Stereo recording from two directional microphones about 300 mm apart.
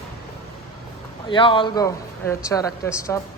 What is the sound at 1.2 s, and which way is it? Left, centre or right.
Speech, centre.